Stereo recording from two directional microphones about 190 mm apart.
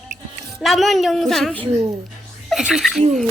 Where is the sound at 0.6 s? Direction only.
Centre (ahead or behind).